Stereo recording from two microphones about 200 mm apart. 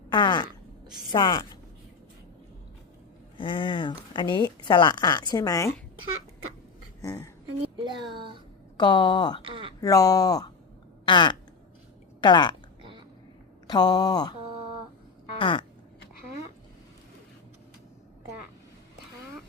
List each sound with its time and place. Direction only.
0.1 s speech: 20° left (ahead or behind)
3.3 s speech: 25° left (ahead or behind)
7.0 s speech: 15° left (ahead or behind)
7.6 s speech: 25° right (ahead or behind)
8.8 s speech: 20° left (ahead or behind)
9.4 s a sound: 25° right (ahead or behind)
9.8 s speech: 15° left (ahead or behind)
13.7 s speech: 20° left (ahead or behind)
15.4 s a sound: 25° left (ahead or behind)